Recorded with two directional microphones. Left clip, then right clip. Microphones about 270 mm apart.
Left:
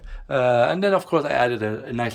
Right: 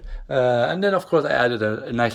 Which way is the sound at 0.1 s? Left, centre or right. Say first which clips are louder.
Even; centre.